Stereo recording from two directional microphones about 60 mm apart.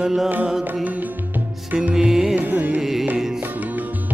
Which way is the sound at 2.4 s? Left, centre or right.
Right.